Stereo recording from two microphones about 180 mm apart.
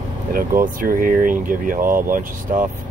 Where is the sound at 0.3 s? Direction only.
50° right (ahead or behind).